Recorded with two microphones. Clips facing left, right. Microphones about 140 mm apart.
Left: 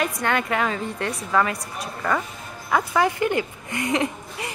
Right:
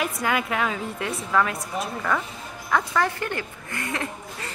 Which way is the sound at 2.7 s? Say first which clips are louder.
Left 3 dB; 15° left (ahead or behind).